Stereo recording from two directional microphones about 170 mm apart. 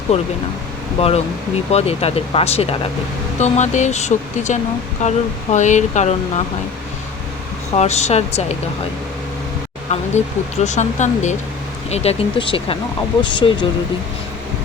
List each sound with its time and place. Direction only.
0.1 s speech: 35° left (ahead or behind)
7.8 s speech: 40° left (ahead or behind)
9.9 s speech: 40° left (ahead or behind)